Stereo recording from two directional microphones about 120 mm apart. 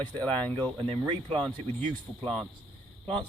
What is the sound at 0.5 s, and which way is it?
Speech, 40° right (ahead or behind).